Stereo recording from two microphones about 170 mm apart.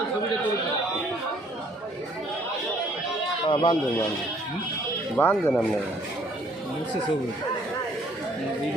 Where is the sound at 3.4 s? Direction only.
30° left (ahead or behind).